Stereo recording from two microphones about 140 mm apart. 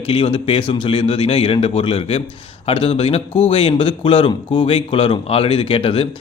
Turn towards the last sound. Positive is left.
turn(degrees=40)  # may be behind; listen again after turning